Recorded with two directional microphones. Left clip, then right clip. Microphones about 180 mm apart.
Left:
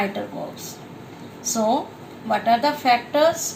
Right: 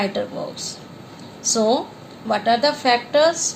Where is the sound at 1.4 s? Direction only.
55° right (ahead or behind).